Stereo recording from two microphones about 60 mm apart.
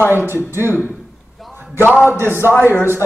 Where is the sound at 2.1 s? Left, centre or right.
Left.